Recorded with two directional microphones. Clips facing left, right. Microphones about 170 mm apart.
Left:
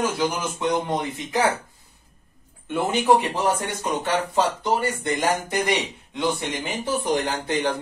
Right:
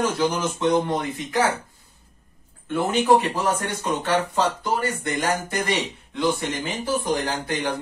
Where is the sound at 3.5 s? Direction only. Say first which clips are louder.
Even; 20° left (ahead or behind).